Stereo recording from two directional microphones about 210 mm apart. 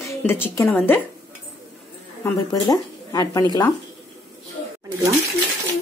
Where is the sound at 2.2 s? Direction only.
15° left (ahead or behind).